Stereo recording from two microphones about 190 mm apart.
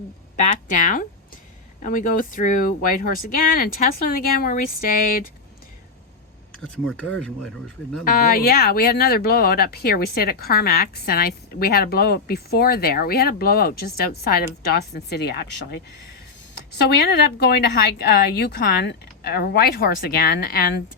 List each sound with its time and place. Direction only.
0.3 s speech: 45° left (ahead or behind)
8.0 s speech: 55° left (ahead or behind)